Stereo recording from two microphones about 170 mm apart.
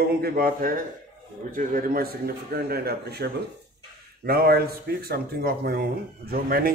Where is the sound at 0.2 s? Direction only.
60° right (ahead or behind).